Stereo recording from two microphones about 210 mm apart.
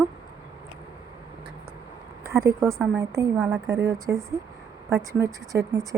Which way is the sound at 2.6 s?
Centre (ahead or behind).